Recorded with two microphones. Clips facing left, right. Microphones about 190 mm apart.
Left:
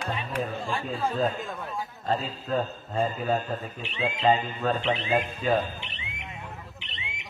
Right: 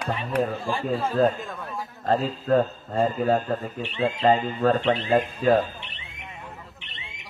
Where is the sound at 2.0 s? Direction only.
55° right (ahead or behind).